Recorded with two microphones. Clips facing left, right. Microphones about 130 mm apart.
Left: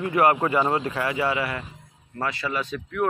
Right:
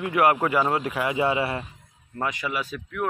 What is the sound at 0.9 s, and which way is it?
A man's voice, 20° right (ahead or behind).